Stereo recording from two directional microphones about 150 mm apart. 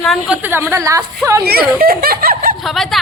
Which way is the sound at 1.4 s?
90° right.